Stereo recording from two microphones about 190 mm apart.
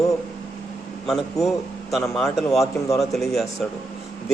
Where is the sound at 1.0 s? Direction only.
Centre (ahead or behind).